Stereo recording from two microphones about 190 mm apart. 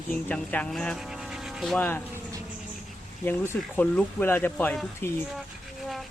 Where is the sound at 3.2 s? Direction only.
10° left (ahead or behind).